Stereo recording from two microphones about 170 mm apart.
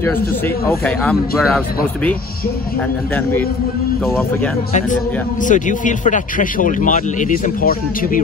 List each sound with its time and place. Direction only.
0.7 s speech: 5° left (ahead or behind)
4.0 s speech: centre (ahead or behind)
5.4 s a man's voice: 50° left (ahead or behind)